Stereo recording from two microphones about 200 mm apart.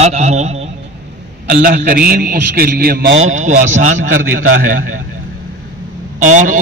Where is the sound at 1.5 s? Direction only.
50° right (ahead or behind).